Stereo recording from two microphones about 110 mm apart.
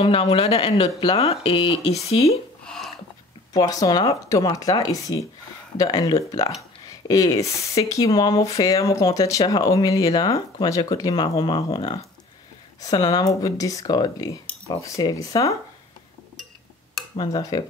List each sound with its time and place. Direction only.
0.0 s speech: 60° left (ahead or behind)
2.6 s a sound: 5° left (ahead or behind)
3.5 s speech: 35° left (ahead or behind); by 12.0 s 55° left (ahead or behind)
12.8 s speech: 35° left (ahead or behind)
17.2 s speech: 35° left (ahead or behind)